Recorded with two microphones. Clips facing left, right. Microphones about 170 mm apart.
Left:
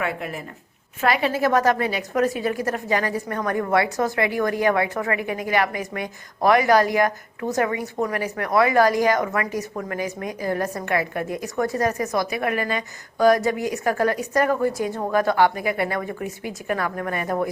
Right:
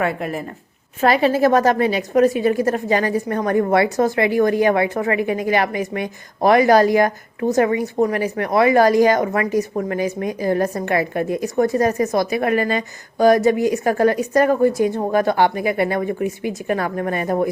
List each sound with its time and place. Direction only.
0.0 s a woman's voice: 40° right (ahead or behind)